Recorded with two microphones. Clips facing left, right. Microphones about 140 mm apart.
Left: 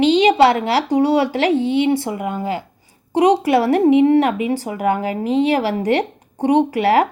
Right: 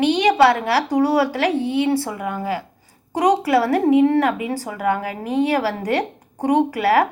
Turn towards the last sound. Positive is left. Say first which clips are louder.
# left 2 dB
turn(degrees=25)  # may be behind; listen again after turning